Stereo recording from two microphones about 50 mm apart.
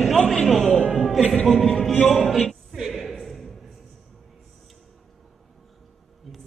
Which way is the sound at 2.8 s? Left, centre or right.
Centre.